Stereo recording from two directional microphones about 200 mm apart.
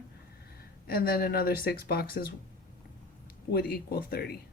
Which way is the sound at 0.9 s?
50° left (ahead or behind).